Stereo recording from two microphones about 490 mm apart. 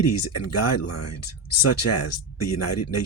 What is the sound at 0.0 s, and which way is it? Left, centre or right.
Speech, left.